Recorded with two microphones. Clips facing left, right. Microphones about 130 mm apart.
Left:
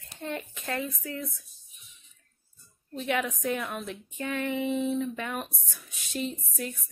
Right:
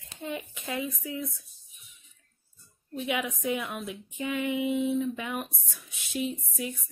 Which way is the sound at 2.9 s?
10° right (ahead or behind).